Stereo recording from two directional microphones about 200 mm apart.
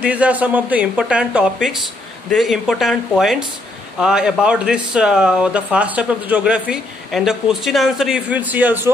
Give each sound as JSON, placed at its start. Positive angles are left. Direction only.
{"t": 0.0, "sound": "speech", "side_deg": -5}